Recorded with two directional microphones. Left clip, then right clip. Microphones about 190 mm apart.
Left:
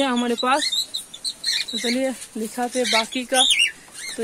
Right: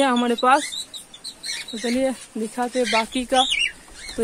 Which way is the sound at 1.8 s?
Centre (ahead or behind).